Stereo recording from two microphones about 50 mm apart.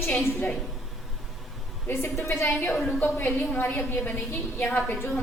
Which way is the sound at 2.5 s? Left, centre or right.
Left.